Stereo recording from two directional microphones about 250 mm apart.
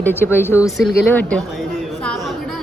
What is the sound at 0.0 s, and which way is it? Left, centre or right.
Speech, centre.